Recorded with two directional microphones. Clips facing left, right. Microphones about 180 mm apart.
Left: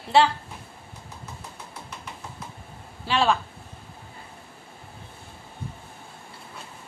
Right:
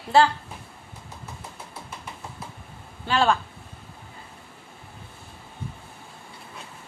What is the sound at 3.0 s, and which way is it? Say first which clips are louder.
Speech: right 1 dB; centre (ahead or behind).